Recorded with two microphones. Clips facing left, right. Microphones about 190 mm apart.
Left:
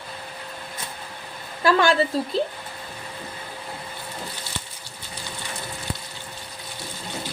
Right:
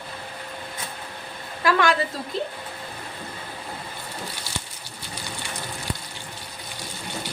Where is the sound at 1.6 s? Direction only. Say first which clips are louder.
Left 2 dB; 30° left (ahead or behind).